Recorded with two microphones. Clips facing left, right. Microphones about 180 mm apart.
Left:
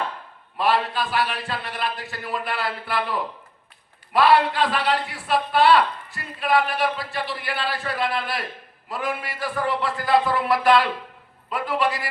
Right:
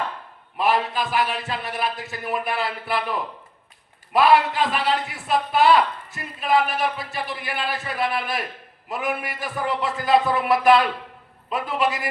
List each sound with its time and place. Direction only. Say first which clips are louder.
0.5 s a man's voice: even; 20° right (ahead or behind)